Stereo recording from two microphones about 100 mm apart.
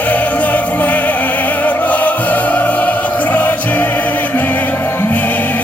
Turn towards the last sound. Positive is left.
turn(degrees=15)  # may be behind; listen again after turning